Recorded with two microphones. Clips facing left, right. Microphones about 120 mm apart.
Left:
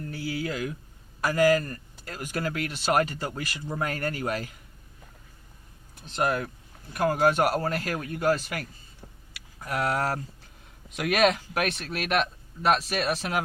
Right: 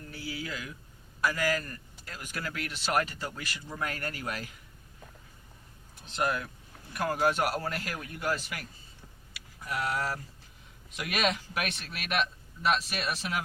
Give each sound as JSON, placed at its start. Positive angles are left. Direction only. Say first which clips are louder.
{"t": 0.1, "sound": "a sound", "louder": "left 6 dB", "side_deg": 55}
{"t": 1.2, "sound": "speech", "louder": "left 8 dB", "side_deg": 45}
{"t": 6.1, "sound": "speech", "louder": "left 4 dB", "side_deg": 40}
{"t": 7.2, "sound": "speech", "louder": "left 5 dB", "side_deg": 45}
{"t": 9.6, "sound": "speech", "louder": "left 5 dB", "side_deg": 55}